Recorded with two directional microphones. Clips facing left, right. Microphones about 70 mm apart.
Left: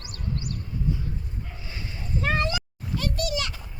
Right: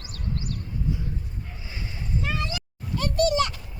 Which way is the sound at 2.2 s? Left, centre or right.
Left.